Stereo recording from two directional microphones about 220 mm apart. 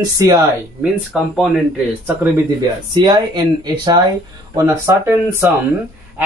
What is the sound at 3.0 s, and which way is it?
Speech, 20° right (ahead or behind).